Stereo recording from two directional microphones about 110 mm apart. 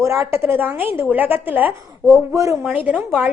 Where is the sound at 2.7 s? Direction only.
15° right (ahead or behind).